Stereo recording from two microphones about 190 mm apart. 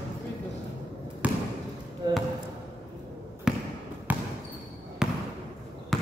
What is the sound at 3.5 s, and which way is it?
Basketball bounce, 5° right (ahead or behind).